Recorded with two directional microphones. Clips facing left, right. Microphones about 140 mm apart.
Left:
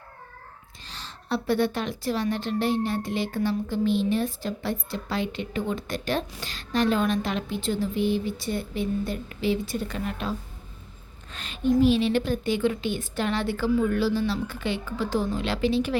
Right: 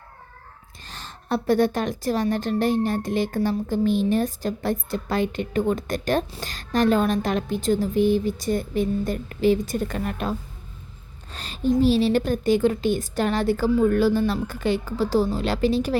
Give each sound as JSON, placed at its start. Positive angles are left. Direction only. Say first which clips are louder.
{"t": 0.9, "sound": "a woman's voice", "louder": "right 3 dB", "side_deg": -50}
{"t": 11.3, "sound": "a sound", "louder": "right 2 dB", "side_deg": -35}
{"t": 11.8, "sound": "a woman's voice", "louder": "right 2 dB", "side_deg": -35}